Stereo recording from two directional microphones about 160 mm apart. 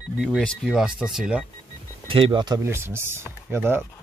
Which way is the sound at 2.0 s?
35° right (ahead or behind).